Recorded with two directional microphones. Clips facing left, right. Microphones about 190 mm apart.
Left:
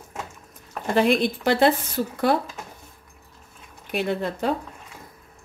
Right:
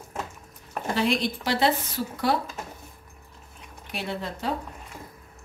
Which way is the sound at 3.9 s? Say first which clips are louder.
Left 7 dB; 55° left (ahead or behind).